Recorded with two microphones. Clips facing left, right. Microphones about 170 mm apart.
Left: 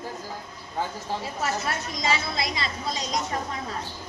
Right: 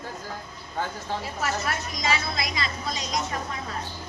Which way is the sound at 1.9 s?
30° left (ahead or behind).